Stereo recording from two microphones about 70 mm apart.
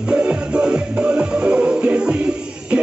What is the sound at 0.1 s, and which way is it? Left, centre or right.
Music, centre.